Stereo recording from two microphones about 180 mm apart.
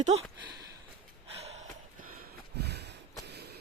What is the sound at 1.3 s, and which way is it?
Gasp, 35° right (ahead or behind).